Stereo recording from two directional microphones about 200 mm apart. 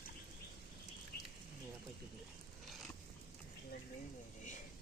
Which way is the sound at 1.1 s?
50° left (ahead or behind).